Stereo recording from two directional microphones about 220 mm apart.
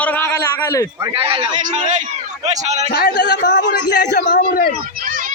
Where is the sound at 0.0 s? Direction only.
5° left (ahead or behind).